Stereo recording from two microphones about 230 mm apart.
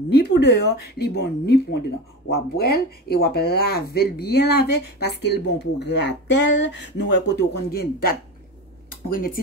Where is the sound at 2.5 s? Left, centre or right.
Left.